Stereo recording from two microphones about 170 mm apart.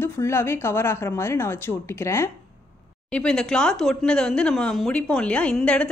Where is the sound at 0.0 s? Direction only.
15° left (ahead or behind).